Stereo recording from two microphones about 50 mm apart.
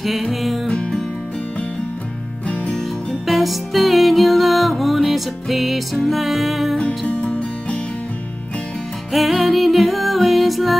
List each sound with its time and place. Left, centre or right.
0.0 s music: centre
2.4 s music: left
2.7 s music: centre
7.1 s music: left
9.1 s music: centre